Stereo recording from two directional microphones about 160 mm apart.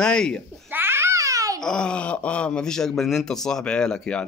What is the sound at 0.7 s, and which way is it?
Babbling, 15° right (ahead or behind).